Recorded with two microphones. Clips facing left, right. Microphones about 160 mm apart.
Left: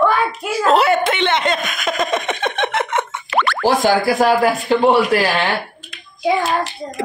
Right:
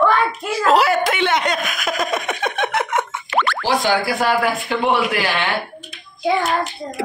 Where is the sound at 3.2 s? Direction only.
80° left.